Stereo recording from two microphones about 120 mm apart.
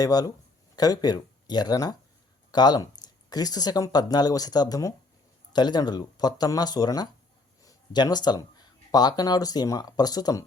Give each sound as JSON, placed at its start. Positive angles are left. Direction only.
{"t": 0.0, "sound": "speech", "side_deg": 30}